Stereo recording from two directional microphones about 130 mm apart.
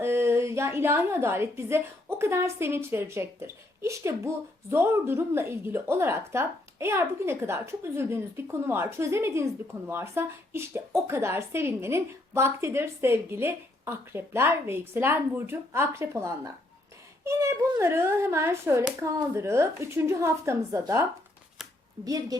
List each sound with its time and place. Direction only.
0.0 s a woman's voice: 20° right (ahead or behind)